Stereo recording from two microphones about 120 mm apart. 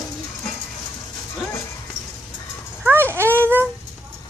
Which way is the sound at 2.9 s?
20° right (ahead or behind).